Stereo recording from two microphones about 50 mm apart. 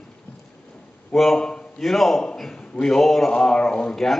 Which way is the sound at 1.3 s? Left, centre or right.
Centre.